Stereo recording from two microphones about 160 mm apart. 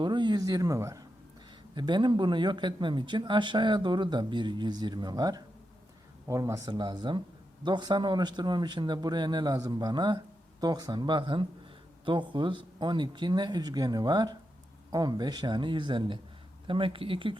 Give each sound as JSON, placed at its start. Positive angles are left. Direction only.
{"t": 0.0, "sound": "speech", "side_deg": -30}